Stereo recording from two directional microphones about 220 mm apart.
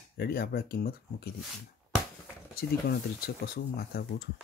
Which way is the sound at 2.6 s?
45° left (ahead or behind).